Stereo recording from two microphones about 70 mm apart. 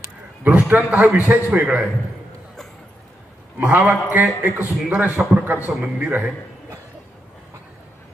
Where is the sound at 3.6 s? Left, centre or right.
Right.